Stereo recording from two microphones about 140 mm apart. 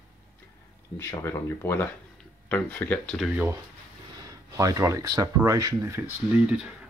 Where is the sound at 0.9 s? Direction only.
20° left (ahead or behind).